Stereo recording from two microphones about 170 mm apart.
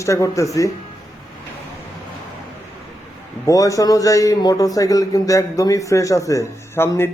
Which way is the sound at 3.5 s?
20° left (ahead or behind).